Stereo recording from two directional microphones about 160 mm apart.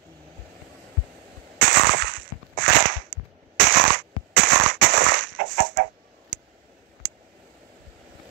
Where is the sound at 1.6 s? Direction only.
90° right; by 5.9 s 70° right (ahead or behind).